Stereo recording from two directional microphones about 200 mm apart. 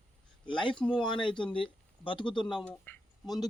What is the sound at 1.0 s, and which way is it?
Speech, 25° left (ahead or behind).